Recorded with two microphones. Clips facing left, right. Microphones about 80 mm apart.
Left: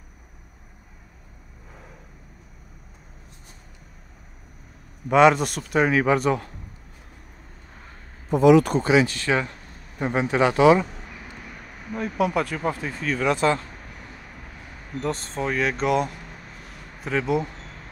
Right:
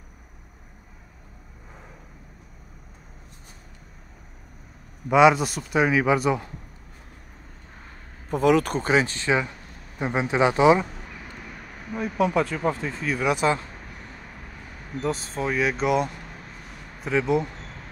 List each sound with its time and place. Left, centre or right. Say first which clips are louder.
5.1 s speech: even; centre
8.5 s speech: left 5 dB; right
8.8 s speech: left 3 dB; right
9.9 s speech: left 1 dB; centre
11.9 s speech: even; centre
15.0 s speech: even; centre
16.6 s a sound: even; centre